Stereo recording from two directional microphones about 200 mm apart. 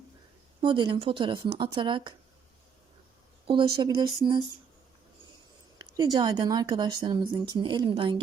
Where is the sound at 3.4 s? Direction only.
25° right (ahead or behind).